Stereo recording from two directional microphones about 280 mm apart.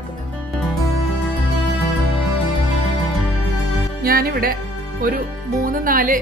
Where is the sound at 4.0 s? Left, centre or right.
Right.